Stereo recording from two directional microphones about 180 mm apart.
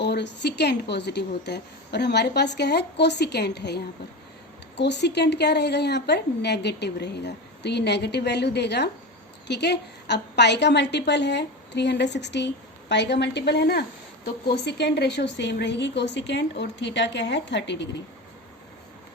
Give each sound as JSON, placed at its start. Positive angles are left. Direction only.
{"t": 0.0, "sound": "a woman's voice", "side_deg": 70}
{"t": 4.8, "sound": "a woman's voice", "side_deg": 70}